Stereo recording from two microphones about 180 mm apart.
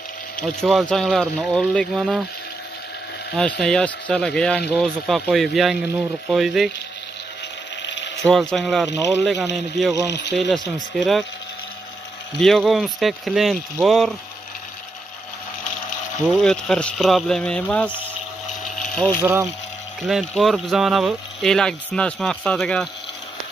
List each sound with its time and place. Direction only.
0.4 s speech: centre (ahead or behind)
3.3 s speech: 5° left (ahead or behind)
7.8 s ratchet: 80° left
8.2 s speech: 5° left (ahead or behind)
12.4 s speech: centre (ahead or behind)
16.3 s speech: centre (ahead or behind)
18.8 s a sound: 5° left (ahead or behind)
19.2 s speech: 10° right (ahead or behind)
20.0 s speech: centre (ahead or behind)